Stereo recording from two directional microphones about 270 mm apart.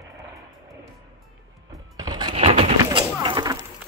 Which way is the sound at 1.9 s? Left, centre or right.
Centre.